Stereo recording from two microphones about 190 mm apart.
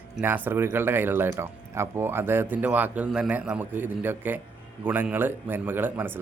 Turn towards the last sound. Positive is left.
turn(degrees=-10)  # may be behind; listen again after turning